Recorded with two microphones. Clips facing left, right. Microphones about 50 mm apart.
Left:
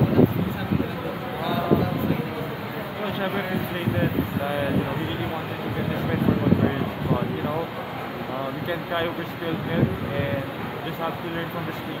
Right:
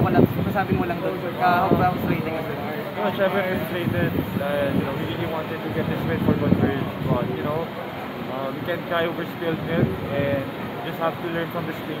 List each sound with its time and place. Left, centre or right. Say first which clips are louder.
1.4 s speech: right 5 dB; right
3.0 s speech: right 6 dB; centre
8.6 s speech: right 3 dB; centre
11.0 s speech: right 5 dB; centre